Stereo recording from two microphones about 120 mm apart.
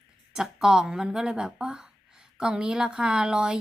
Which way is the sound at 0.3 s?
5° right (ahead or behind).